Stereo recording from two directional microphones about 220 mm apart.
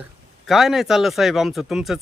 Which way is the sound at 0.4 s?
Centre (ahead or behind).